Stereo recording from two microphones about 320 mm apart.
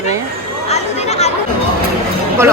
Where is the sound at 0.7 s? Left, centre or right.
Centre.